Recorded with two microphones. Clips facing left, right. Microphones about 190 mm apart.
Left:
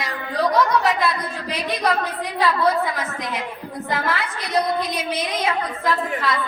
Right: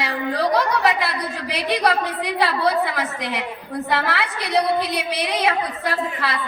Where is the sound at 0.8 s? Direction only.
70° right (ahead or behind).